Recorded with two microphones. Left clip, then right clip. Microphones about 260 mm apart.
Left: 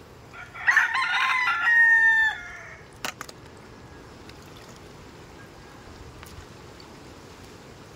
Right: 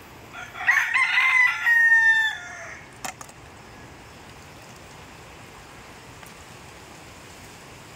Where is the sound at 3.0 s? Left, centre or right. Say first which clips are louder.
Left 3 dB; centre.